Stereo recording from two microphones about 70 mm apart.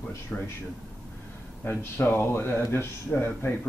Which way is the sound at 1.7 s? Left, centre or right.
Left.